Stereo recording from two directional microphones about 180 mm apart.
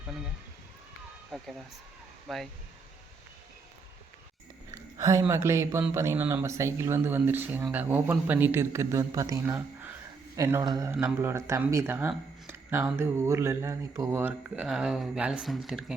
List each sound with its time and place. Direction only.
1.3 s speech: centre (ahead or behind)
4.7 s a sound: 20° right (ahead or behind)
5.3 s speech: 15° right (ahead or behind)
10.9 s speech: 10° right (ahead or behind)